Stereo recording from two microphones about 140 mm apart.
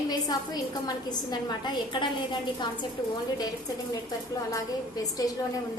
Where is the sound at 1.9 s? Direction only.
35° left (ahead or behind).